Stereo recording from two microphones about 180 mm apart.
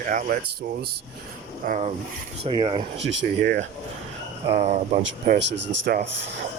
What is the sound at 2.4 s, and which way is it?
Speech, 30° right (ahead or behind).